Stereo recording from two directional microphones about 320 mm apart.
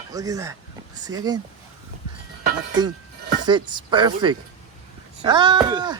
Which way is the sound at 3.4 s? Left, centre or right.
Centre.